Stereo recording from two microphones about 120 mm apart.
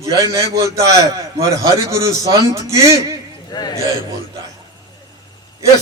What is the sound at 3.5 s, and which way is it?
Speech, 35° left (ahead or behind).